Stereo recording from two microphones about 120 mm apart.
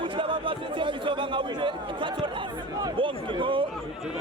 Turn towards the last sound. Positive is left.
turn(degrees=-45)  # may be behind; listen again after turning